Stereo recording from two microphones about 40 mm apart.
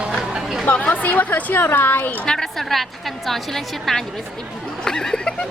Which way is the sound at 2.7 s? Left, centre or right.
Centre.